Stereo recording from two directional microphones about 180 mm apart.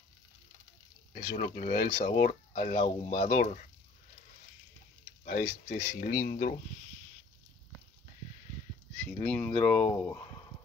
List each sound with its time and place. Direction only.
1.3 s speech: 50° left (ahead or behind)
2.8 s speech: 40° left (ahead or behind)
5.2 s speech: 50° left (ahead or behind)
8.9 s speech: 5° left (ahead or behind)